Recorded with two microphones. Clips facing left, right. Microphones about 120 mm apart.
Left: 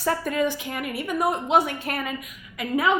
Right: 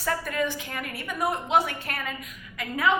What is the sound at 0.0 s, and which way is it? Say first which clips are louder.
Speech: left 4 dB; 25° left (ahead or behind).